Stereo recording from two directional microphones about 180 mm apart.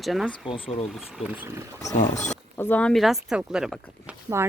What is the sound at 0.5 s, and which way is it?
Speech, 35° left (ahead or behind).